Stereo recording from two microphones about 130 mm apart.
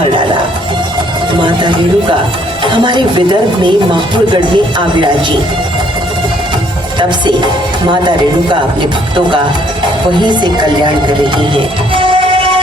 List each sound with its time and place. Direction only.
1.4 s speech: 40° right (ahead or behind)
10.2 s speech: 35° right (ahead or behind)